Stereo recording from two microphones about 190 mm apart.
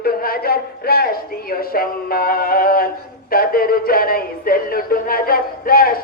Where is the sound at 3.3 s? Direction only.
50° left (ahead or behind).